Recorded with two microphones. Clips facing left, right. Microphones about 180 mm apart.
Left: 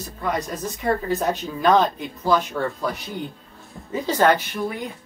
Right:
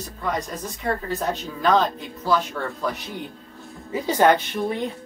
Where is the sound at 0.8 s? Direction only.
15° left (ahead or behind).